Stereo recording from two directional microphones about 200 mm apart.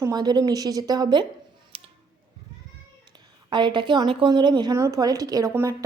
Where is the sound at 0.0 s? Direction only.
20° right (ahead or behind).